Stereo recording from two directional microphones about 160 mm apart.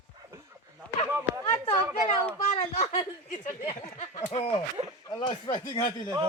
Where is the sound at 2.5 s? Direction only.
40° left (ahead or behind).